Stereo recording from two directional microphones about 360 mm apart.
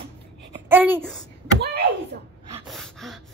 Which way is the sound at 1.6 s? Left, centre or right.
Right.